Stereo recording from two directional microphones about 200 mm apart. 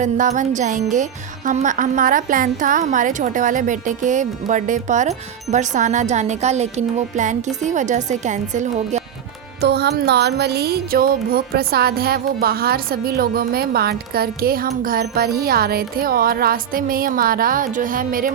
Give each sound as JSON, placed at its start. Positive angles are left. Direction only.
{"t": 0.0, "sound": "a woman's voice", "side_deg": -40}
{"t": 9.6, "sound": "music", "side_deg": -55}